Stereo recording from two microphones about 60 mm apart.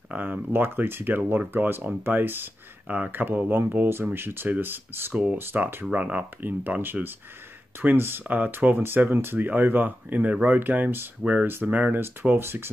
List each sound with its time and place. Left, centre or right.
0.1 s speech: right
5.1 s speech: right
5.4 s speech: right
5.9 s speech: right
12.0 s speech: right